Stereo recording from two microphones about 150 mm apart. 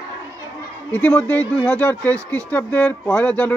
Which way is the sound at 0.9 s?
10° left (ahead or behind).